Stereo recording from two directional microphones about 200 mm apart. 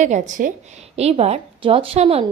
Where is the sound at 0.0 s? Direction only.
35° right (ahead or behind).